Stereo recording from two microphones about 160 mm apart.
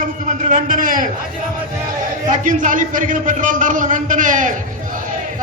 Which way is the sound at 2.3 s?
55° right (ahead or behind).